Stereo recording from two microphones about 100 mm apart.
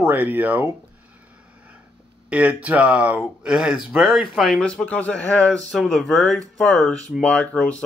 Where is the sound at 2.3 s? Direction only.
15° right (ahead or behind); by 7.8 s 10° left (ahead or behind).